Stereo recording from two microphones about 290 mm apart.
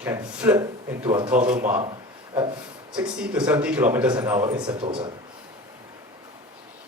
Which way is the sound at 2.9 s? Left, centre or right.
Centre.